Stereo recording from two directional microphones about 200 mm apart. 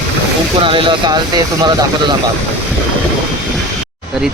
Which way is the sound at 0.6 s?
25° right (ahead or behind).